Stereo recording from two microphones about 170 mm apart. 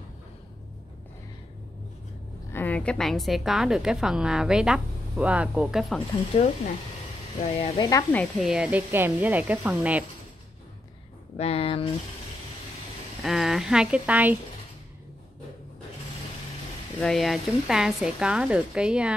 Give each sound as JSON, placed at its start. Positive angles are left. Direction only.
{"t": 2.5, "sound": "a woman's voice", "side_deg": 10}
{"t": 6.3, "sound": "speech", "side_deg": 35}
{"t": 7.7, "sound": "speech", "side_deg": 20}
{"t": 8.1, "sound": "a woman's voice", "side_deg": 5}
{"t": 8.5, "sound": "speech", "side_deg": -5}
{"t": 11.3, "sound": "speech", "side_deg": 35}
{"t": 13.2, "sound": "a woman's voice", "side_deg": 0}
{"t": 17.0, "sound": "a woman's voice", "side_deg": 0}